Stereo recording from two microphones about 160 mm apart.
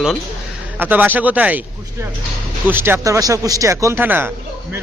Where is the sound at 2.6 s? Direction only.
15° right (ahead or behind).